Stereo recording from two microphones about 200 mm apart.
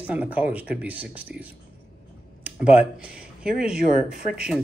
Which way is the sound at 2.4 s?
5° right (ahead or behind).